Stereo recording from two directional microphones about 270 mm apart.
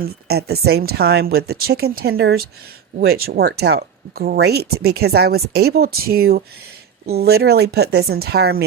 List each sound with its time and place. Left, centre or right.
0.0 s speech: right